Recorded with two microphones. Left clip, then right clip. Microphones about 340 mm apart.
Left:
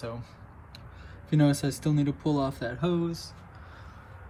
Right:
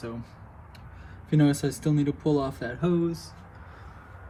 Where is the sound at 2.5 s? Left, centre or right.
Centre.